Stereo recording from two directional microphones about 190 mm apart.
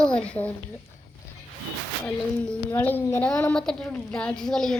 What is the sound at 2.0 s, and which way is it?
A woman's voice, 10° left (ahead or behind).